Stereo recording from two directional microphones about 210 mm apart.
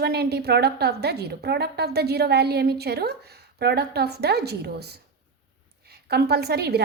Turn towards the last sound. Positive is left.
turn(degrees=-50)  # may be behind; listen again after turning